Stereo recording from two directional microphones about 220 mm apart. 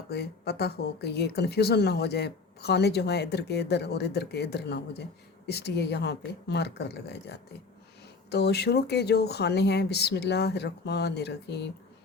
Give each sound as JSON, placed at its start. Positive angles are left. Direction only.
{"t": 0.1, "sound": "speech", "side_deg": 45}